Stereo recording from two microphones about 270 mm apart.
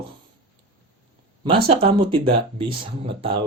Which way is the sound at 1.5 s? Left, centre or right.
Centre.